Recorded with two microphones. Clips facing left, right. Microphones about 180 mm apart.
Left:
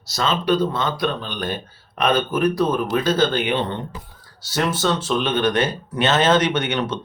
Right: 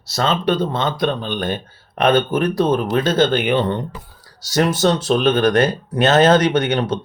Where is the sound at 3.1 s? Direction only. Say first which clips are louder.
Right 4 dB; 55° right (ahead or behind).